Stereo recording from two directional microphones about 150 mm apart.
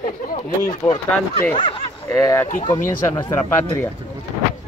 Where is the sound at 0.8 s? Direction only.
25° left (ahead or behind).